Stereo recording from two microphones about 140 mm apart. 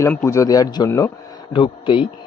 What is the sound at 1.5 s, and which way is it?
Speech, 40° left (ahead or behind).